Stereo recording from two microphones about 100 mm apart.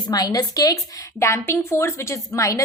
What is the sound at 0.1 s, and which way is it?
A woman's voice, 40° left (ahead or behind).